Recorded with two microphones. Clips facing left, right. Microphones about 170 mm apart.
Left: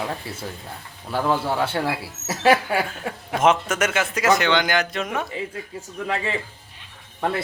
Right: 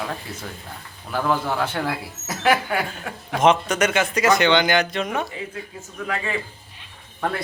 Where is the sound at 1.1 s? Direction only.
30° left (ahead or behind).